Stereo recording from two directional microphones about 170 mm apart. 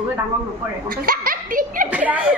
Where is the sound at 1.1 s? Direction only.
55° right (ahead or behind).